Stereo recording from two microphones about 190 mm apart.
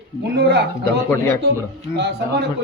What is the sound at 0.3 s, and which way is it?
Speech, 60° right (ahead or behind).